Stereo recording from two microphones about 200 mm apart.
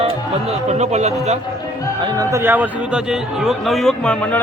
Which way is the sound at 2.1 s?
15° right (ahead or behind).